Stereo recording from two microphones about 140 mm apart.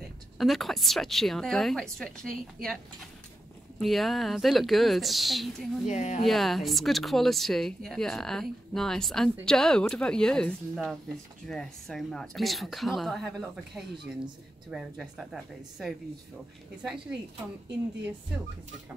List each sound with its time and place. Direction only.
0.4 s speech: centre (ahead or behind)
5.9 s speech: 60° left (ahead or behind)
6.2 s speech: centre (ahead or behind)